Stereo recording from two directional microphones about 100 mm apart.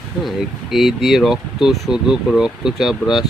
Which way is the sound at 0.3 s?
5° right (ahead or behind).